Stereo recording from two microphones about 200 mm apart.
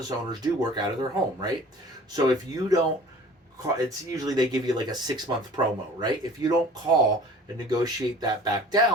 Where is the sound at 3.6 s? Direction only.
15° right (ahead or behind).